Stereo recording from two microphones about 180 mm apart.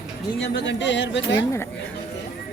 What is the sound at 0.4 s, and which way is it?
Speech, 80° left.